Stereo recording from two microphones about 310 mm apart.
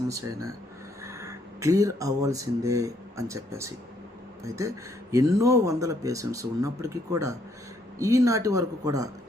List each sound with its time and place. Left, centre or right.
0.1 s speech: centre